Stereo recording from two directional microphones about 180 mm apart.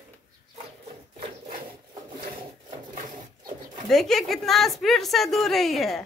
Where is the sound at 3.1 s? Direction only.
25° right (ahead or behind).